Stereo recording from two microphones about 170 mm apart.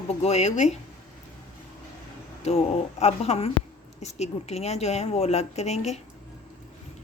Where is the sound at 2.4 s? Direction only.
40° left (ahead or behind).